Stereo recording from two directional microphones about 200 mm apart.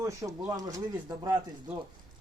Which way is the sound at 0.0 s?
15° right (ahead or behind).